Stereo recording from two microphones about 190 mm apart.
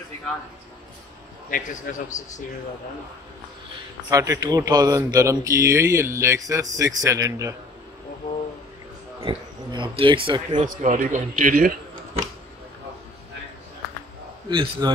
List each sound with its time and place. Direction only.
1.5 s a man's voice: 45° left (ahead or behind)
4.1 s speech: 20° right (ahead or behind)
9.2 s speech: 25° right (ahead or behind)
10.6 s a man's voice: 40° right (ahead or behind)
14.5 s speech: 25° right (ahead or behind)